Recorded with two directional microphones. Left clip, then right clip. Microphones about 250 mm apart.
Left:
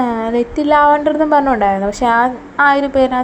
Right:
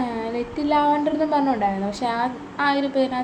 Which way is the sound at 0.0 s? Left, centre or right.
Left.